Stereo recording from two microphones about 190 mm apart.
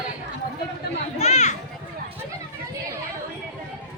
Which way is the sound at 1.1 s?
35° left (ahead or behind).